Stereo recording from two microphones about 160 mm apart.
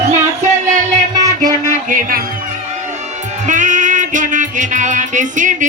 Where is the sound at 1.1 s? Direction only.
25° right (ahead or behind).